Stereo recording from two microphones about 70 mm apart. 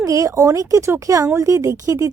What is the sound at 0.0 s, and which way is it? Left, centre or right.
Speech, right.